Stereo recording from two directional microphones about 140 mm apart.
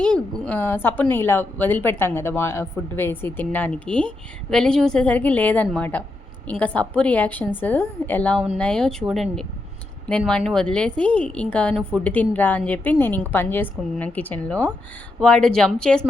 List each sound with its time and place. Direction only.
0.0 s a woman's voice: 5° left (ahead or behind)